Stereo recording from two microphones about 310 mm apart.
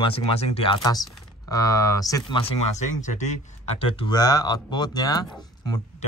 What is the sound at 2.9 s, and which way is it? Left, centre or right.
Speech, left.